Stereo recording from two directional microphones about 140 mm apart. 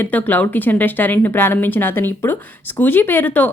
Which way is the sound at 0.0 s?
15° left (ahead or behind).